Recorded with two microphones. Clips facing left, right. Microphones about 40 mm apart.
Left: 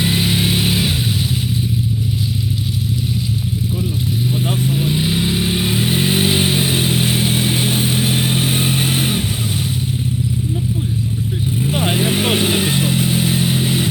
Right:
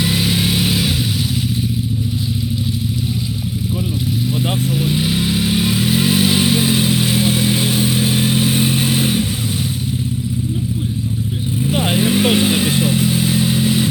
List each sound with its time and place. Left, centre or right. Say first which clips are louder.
0.0 s vehicle: even; centre
4.7 s vehicle: even; centre
5.4 s vehicle: right 1 dB; centre; by 9.2 s left
11.6 s vehicle: right 2 dB; left